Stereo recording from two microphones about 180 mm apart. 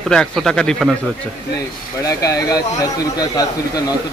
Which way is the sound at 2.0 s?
20° left (ahead or behind).